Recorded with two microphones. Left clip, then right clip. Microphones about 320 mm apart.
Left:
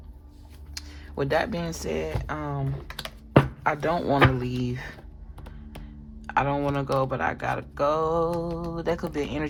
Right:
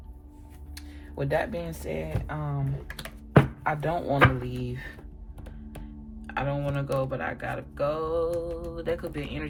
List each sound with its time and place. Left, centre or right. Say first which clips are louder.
0.7 s speech: left 5 dB; left
3.0 s computer keyboard: left 2 dB; left
4.6 s speech: left 4 dB; left
6.2 s speech: left 6 dB; centre